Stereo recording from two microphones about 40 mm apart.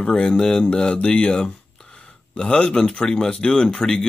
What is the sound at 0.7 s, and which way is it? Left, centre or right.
Speech, left.